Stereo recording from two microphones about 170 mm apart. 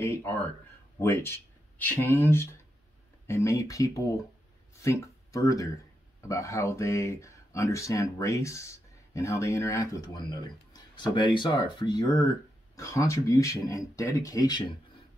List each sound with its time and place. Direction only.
0.0 s speech: 15° left (ahead or behind)